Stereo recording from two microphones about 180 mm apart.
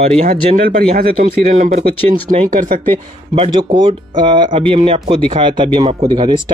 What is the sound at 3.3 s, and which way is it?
Speech, 30° right (ahead or behind).